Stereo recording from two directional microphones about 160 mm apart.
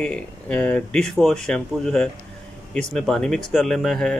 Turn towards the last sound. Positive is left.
turn(degrees=5)  # may be behind; listen again after turning